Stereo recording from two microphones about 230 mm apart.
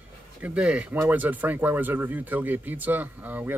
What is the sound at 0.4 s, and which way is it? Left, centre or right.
Speech, centre.